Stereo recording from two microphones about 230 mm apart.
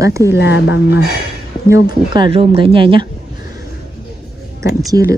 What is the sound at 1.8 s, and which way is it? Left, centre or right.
Speech, right.